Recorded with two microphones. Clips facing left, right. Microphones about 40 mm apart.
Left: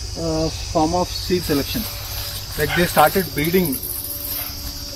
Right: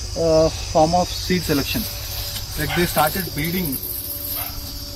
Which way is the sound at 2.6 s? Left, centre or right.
Centre.